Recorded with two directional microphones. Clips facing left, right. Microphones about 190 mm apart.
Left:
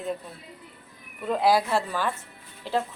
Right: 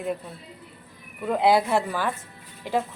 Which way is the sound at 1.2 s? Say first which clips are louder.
Right 2 dB; 15° right (ahead or behind).